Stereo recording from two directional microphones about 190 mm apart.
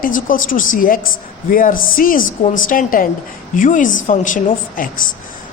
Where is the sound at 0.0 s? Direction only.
45° left (ahead or behind).